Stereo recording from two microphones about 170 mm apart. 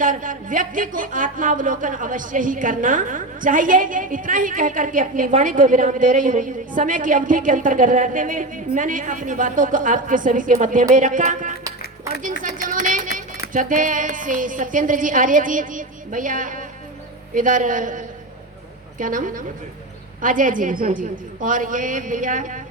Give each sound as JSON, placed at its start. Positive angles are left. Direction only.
{"t": 0.0, "sound": "a woman's voice", "side_deg": -50}
{"t": 12.4, "sound": "a sound", "side_deg": -50}
{"t": 12.8, "sound": "music", "side_deg": -50}
{"t": 13.5, "sound": "a woman's voice", "side_deg": -50}